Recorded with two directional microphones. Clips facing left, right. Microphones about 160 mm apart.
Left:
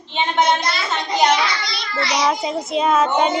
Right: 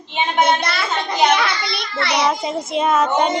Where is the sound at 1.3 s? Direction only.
60° right (ahead or behind).